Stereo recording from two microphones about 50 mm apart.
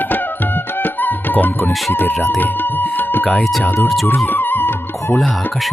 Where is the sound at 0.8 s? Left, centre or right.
Left.